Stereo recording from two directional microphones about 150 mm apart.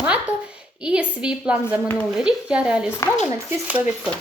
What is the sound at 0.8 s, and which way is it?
A woman's voice, 10° right (ahead or behind).